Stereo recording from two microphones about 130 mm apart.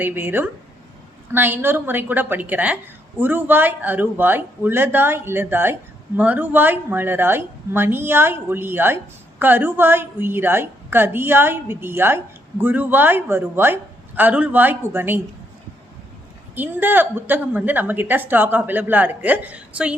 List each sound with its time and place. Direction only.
0.0 s a woman's voice: 15° right (ahead or behind)
16.6 s a woman's voice: 15° right (ahead or behind)